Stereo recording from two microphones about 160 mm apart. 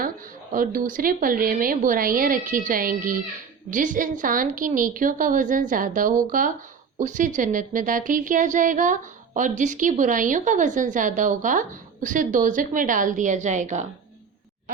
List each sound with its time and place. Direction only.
0.5 s a woman's voice: 60° right (ahead or behind)